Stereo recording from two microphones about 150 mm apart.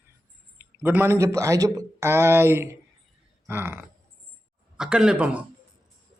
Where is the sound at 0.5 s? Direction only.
15° right (ahead or behind).